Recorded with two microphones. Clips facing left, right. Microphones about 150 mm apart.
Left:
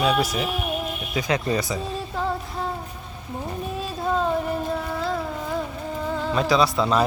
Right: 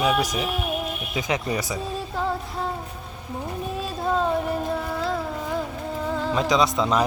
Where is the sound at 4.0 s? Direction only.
Centre (ahead or behind).